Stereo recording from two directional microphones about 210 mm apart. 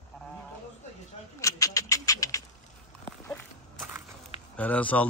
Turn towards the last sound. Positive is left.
turn(degrees=5)  # may be behind; listen again after turning